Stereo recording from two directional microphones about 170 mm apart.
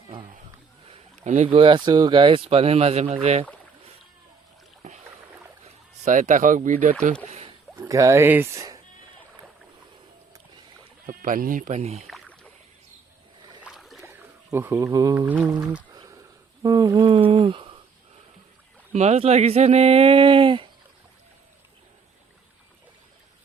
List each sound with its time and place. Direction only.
1.2 s speech: 45° right (ahead or behind)
1.5 s speech: 30° right (ahead or behind)
4.8 s rowboat: 45° right (ahead or behind)
6.1 s speech: 50° right (ahead or behind)
7.3 s rowboat: 35° right (ahead or behind)
7.8 s speech: 20° right (ahead or behind)
11.0 s speech: 55° right (ahead or behind)
12.0 s rowboat: 5° left (ahead or behind)
13.6 s boat: 5° right (ahead or behind)
14.0 s a sound: 15° right (ahead or behind)
15.3 s speech: 5° right (ahead or behind)
15.9 s a sound: 20° right (ahead or behind)
16.6 s speech: 25° right (ahead or behind)
18.9 s speech: 40° right (ahead or behind)